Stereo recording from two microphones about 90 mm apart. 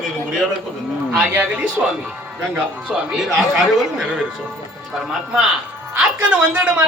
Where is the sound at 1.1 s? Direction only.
15° right (ahead or behind).